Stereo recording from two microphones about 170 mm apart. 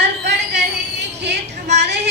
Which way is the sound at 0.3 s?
90° right.